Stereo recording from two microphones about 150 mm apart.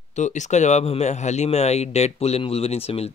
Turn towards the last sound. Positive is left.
turn(degrees=40)  # may be behind; listen again after turning